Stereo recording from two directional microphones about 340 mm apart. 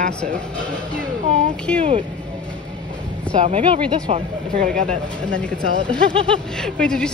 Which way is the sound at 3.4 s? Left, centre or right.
Centre.